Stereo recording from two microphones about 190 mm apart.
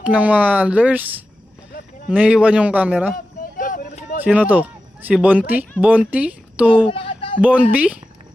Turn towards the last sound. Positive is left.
turn(degrees=-5)  # may be behind; listen again after turning